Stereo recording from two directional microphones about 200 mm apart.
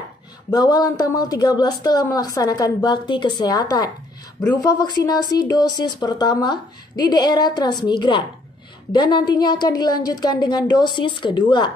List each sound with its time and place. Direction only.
0.5 s a woman's voice: 20° left (ahead or behind)